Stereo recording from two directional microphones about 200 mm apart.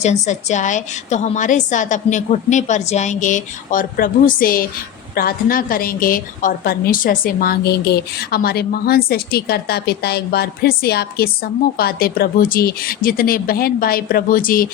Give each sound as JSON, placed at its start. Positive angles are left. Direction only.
{"t": 0.0, "sound": "a woman's voice", "side_deg": 35}